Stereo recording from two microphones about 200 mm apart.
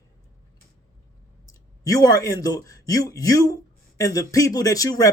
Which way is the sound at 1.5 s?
15° left (ahead or behind).